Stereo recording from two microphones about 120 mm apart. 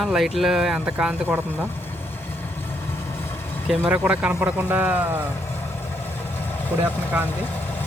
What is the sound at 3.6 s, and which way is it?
Speech, 10° right (ahead or behind).